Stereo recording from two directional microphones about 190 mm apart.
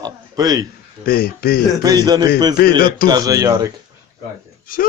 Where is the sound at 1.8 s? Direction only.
20° right (ahead or behind).